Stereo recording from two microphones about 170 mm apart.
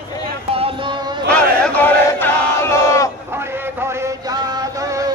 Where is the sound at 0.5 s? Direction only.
30° right (ahead or behind).